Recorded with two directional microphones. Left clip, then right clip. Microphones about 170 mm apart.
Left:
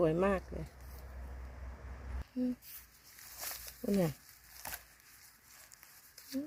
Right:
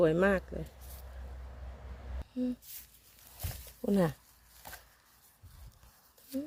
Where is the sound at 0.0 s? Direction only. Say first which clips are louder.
Right 4 dB; 10° right (ahead or behind).